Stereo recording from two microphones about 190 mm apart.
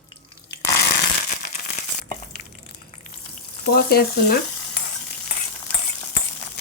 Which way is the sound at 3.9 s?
55° left (ahead or behind).